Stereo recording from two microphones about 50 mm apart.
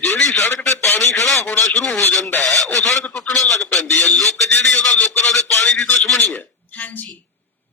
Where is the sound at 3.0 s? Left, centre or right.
Left.